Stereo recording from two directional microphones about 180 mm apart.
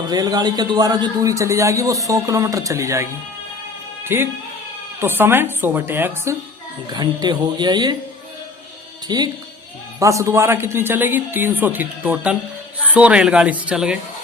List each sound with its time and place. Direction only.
0.1 s a man's voice: 20° right (ahead or behind)
4.1 s a man's voice: 15° right (ahead or behind)
6.9 s speech: 25° right (ahead or behind)
9.0 s a man's voice: 25° right (ahead or behind); by 14.0 s 5° right (ahead or behind)